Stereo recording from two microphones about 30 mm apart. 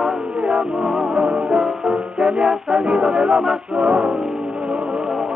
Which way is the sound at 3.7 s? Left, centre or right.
Right.